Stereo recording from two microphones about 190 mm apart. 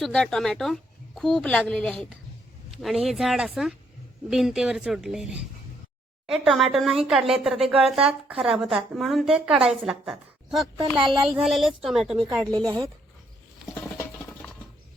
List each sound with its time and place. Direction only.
0.0 s a woman's voice: 5° left (ahead or behind)
10.8 s speech: 25° right (ahead or behind)
11.3 s a woman's voice: centre (ahead or behind)
12.2 s speech: 20° right (ahead or behind)